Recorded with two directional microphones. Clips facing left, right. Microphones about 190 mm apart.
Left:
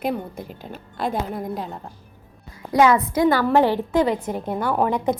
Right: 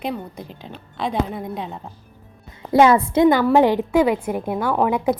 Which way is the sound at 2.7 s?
30° right (ahead or behind).